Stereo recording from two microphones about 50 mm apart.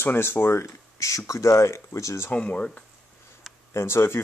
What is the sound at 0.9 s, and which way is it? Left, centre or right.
Speech, left.